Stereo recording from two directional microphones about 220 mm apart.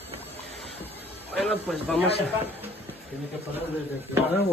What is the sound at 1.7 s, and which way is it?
Speech, centre (ahead or behind).